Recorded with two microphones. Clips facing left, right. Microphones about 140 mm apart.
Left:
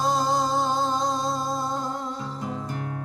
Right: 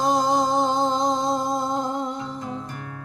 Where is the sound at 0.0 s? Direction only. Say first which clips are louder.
Right 3 dB; 20° right (ahead or behind).